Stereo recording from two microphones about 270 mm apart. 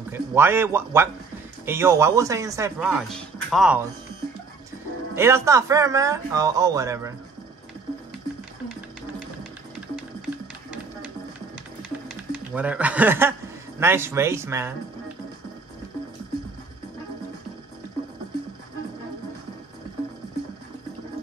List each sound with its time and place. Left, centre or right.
0.1 s speech: centre
5.1 s speech: centre
12.1 s speech: centre